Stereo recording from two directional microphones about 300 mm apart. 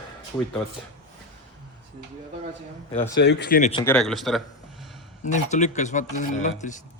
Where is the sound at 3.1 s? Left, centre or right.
Left.